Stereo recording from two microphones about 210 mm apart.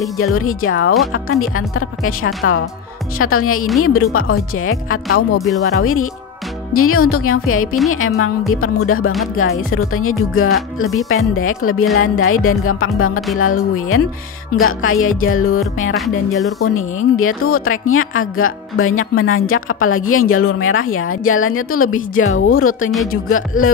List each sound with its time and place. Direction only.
0.2 s a woman's voice: 90° left; by 2.6 s 75° left (ahead or behind)
3.2 s speech: 90° left
7.9 s a woman's voice: 80° left
14.6 s a woman's voice: 75° left (ahead or behind)
15.9 s music: centre (ahead or behind)
16.6 s a woman's voice: 80° left